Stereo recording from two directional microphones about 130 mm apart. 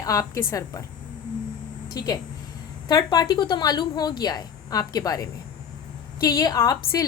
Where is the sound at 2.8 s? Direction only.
30° left (ahead or behind).